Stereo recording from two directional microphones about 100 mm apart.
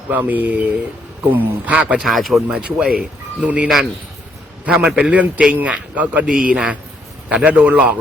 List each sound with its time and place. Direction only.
0.1 s a man's voice: 15° right (ahead or behind)
2.0 s a man's voice: centre (ahead or behind)